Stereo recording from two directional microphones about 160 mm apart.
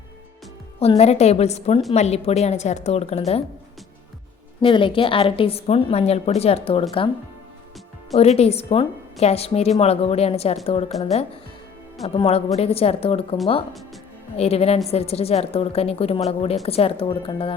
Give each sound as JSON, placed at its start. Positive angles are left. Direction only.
{"t": 0.8, "sound": "a woman's voice", "side_deg": 40}
{"t": 4.6, "sound": "a woman's voice", "side_deg": 30}
{"t": 8.1, "sound": "a woman's voice", "side_deg": 40}
{"t": 14.3, "sound": "a woman's voice", "side_deg": 40}